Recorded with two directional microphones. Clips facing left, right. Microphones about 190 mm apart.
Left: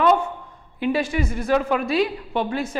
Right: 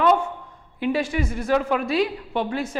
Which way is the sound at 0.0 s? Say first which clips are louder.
Left 1 dB; 15° left (ahead or behind).